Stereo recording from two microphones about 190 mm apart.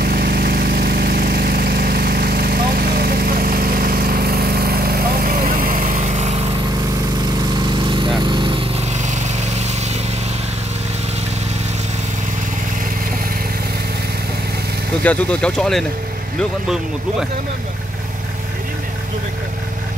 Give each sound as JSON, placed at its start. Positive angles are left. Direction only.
{"t": 0.0, "sound": "vehicle", "side_deg": -55}
{"t": 8.2, "sound": "lawn mower", "side_deg": -25}
{"t": 15.0, "sound": "speech", "side_deg": 5}